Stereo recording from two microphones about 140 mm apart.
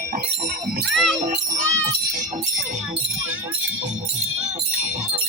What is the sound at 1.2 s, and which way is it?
Jingle bell, 65° right (ahead or behind).